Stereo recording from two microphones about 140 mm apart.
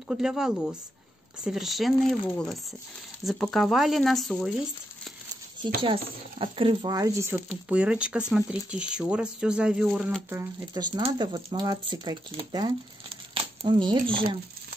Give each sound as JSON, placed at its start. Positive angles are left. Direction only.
{"t": 0.1, "sound": "speech", "side_deg": -5}
{"t": 5.6, "sound": "speech", "side_deg": -35}
{"t": 7.6, "sound": "speech", "side_deg": -10}
{"t": 10.7, "sound": "speech", "side_deg": -30}